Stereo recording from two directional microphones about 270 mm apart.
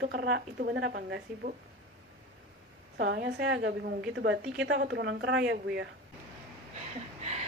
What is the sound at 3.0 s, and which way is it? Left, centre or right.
A woman's voice, right.